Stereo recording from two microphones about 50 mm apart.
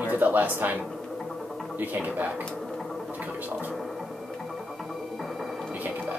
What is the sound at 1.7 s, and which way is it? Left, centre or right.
Speech, right.